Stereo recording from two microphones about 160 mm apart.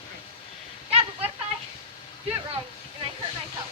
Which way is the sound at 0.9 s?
40° right (ahead or behind).